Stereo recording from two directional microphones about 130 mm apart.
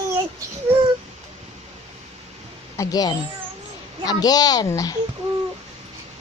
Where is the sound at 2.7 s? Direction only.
30° left (ahead or behind).